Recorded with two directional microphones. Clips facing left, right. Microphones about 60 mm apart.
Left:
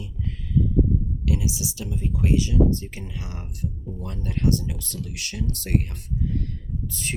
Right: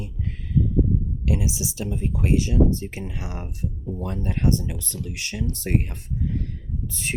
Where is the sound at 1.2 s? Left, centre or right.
Right.